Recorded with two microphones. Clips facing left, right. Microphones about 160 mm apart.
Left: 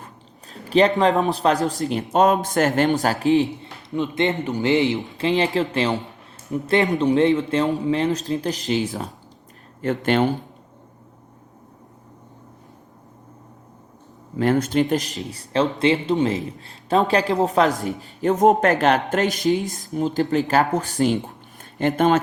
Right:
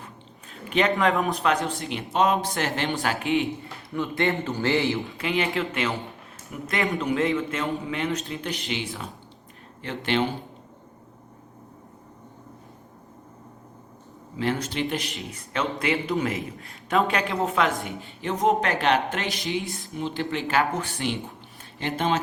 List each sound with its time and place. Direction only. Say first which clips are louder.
0.0 s biting: left 1 dB; 35° left (ahead or behind)
0.9 s a man's voice: left 5 dB; 25° left (ahead or behind)
3.6 s a man's voice: left 4 dB; 20° left (ahead or behind); by 10.2 s 45° left (ahead or behind)
14.3 s a man's voice: left 8 dB; 50° left (ahead or behind)